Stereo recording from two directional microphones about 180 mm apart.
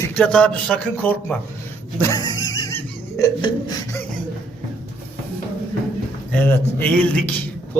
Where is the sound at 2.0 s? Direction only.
20° left (ahead or behind).